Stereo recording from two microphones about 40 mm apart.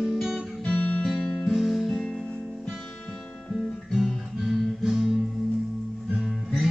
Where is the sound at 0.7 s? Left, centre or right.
Left.